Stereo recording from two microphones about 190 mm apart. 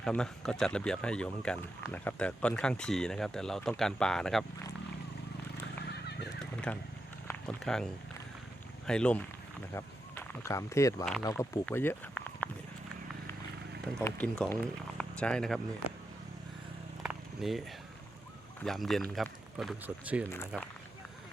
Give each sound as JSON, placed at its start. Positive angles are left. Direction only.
{"t": 0.0, "sound": "speech", "side_deg": 5}
{"t": 5.8, "sound": "horse", "side_deg": 60}
{"t": 6.4, "sound": "a sound", "side_deg": 5}
{"t": 7.3, "sound": "speech", "side_deg": 5}
{"t": 8.9, "sound": "speech", "side_deg": 5}
{"t": 14.0, "sound": "speech", "side_deg": 5}
{"t": 17.0, "sound": "a sound", "side_deg": 0}
{"t": 18.6, "sound": "speech", "side_deg": 0}